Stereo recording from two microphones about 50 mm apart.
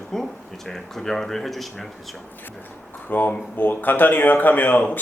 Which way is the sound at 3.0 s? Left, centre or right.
Left.